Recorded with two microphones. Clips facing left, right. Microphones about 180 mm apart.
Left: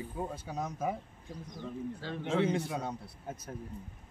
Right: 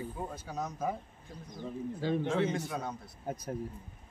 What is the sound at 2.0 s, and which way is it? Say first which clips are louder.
Speech: right 9 dB; 15° right (ahead or behind).